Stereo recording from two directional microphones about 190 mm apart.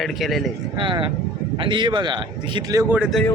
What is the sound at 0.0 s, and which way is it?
Speech, centre (ahead or behind).